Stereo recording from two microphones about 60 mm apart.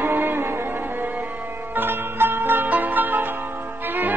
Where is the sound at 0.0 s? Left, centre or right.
Right.